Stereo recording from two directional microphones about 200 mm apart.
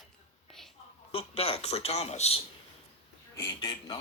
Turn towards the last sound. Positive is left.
turn(degrees=15)  # may be behind; listen again after turning